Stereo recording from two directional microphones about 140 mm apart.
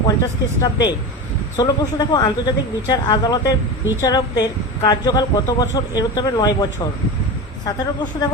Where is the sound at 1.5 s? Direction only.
30° left (ahead or behind).